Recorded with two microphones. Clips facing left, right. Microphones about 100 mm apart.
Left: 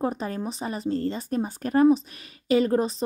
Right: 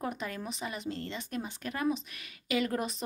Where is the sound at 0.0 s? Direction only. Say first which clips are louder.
Left 8 dB; 35° left (ahead or behind).